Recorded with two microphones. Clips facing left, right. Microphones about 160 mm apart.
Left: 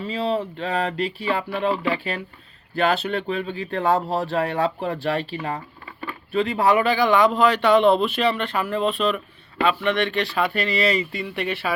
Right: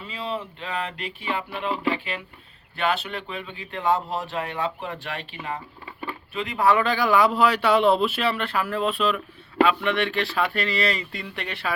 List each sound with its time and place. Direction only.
0.0 s speech: 35° left (ahead or behind)
5.8 s a sound: 20° right (ahead or behind)
6.3 s speech: 30° left (ahead or behind)
6.7 s speech: 10° left (ahead or behind)
6.9 s speech: centre (ahead or behind)